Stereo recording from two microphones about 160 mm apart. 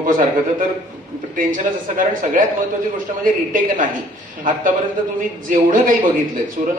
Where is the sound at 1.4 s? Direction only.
55° right (ahead or behind).